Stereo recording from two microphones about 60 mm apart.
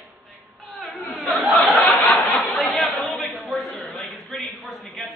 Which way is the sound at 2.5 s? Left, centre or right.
Centre.